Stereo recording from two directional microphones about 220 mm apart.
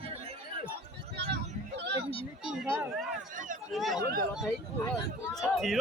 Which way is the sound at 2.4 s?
5° right (ahead or behind).